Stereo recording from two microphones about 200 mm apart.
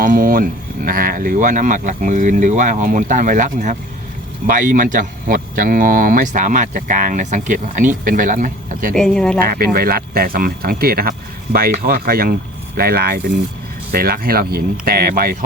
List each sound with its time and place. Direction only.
0.0 s speech: 45° right (ahead or behind)
9.0 s speech: 5° left (ahead or behind)
9.4 s speech: 50° right (ahead or behind)